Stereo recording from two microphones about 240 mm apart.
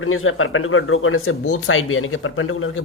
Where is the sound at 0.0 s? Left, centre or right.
Left.